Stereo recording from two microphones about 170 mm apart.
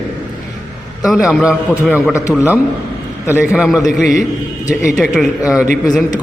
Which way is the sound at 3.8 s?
45° right (ahead or behind).